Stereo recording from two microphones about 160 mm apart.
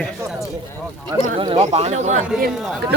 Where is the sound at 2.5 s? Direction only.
Centre (ahead or behind).